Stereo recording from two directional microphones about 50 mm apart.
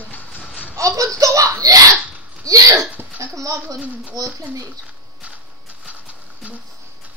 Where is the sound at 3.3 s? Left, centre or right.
Right.